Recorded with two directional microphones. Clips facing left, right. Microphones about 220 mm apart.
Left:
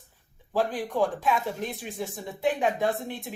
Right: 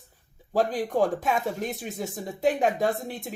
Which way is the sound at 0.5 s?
40° right (ahead or behind).